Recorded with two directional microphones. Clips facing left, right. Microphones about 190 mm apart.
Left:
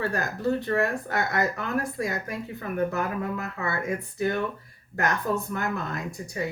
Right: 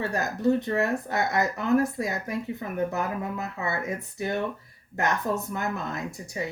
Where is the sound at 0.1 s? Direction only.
20° right (ahead or behind).